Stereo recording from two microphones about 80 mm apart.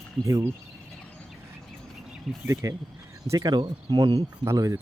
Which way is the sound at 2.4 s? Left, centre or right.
Right.